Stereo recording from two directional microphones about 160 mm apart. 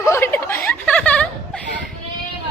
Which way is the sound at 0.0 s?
15° left (ahead or behind).